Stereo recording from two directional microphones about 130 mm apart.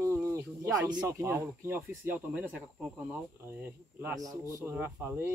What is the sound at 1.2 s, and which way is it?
Speech, 20° right (ahead or behind).